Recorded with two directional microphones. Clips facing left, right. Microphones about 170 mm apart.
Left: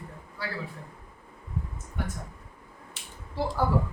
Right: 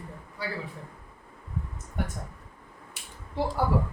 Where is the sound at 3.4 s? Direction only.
20° right (ahead or behind).